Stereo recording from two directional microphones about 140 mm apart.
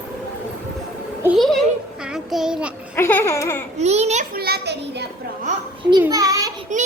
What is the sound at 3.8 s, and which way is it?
Speech, 50° right (ahead or behind).